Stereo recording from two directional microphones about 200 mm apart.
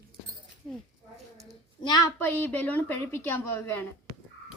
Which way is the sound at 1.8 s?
20° left (ahead or behind).